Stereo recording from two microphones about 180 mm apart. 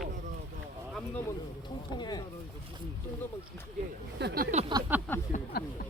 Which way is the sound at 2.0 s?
20° left (ahead or behind).